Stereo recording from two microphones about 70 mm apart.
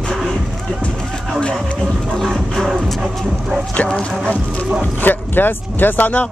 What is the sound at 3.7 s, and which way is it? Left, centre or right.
Speech, centre.